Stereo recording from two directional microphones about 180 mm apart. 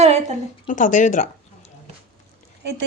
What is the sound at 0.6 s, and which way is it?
Speech, 45° left (ahead or behind).